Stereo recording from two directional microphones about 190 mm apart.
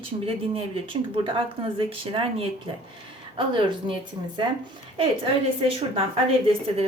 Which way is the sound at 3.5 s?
25° right (ahead or behind).